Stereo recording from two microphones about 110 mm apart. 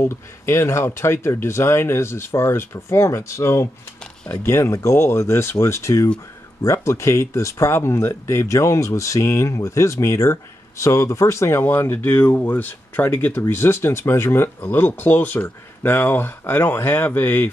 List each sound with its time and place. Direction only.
0.0 s speech: 25° left (ahead or behind)